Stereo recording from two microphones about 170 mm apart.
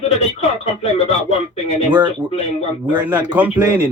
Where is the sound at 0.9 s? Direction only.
35° left (ahead or behind).